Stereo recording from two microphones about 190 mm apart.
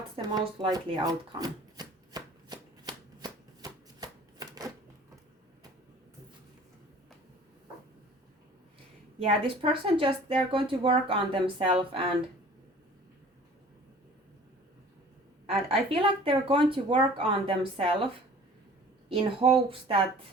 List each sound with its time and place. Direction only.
0.2 s chopping: 20° right (ahead or behind)
9.1 s speech: 30° right (ahead or behind)
15.9 s speech: 30° right (ahead or behind)